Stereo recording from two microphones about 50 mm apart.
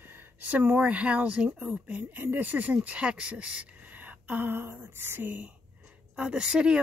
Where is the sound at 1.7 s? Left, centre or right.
Right.